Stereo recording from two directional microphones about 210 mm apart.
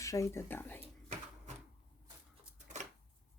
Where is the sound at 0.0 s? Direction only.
15° left (ahead or behind).